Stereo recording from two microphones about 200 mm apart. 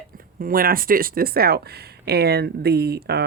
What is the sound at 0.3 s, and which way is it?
Speech, 45° right (ahead or behind).